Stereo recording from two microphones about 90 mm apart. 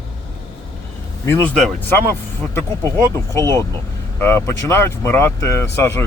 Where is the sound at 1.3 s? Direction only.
25° left (ahead or behind).